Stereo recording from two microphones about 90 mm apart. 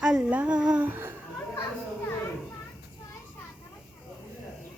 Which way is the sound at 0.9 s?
25° right (ahead or behind).